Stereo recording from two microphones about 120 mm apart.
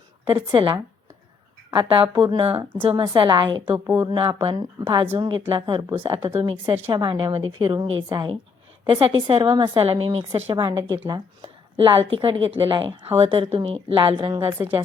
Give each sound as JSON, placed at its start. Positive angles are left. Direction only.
{"t": 0.3, "sound": "a woman's voice", "side_deg": -40}
{"t": 1.7, "sound": "a woman's voice", "side_deg": -40}
{"t": 3.8, "sound": "speech", "side_deg": -20}
{"t": 4.1, "sound": "a woman's voice", "side_deg": -45}
{"t": 8.9, "sound": "a woman's voice", "side_deg": -50}
{"t": 10.6, "sound": "speech", "side_deg": -25}
{"t": 10.8, "sound": "a woman's voice", "side_deg": -40}